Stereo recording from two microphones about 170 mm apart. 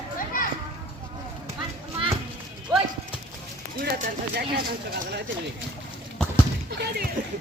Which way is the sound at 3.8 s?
65° right (ahead or behind).